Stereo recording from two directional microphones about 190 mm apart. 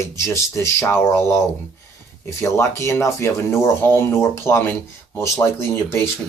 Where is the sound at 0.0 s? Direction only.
15° left (ahead or behind).